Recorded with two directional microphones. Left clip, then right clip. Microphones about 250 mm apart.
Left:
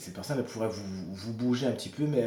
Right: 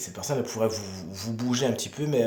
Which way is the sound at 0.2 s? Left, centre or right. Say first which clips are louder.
Right 6 dB; right.